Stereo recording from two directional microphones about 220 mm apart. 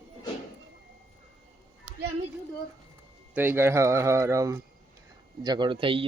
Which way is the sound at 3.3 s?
10° right (ahead or behind).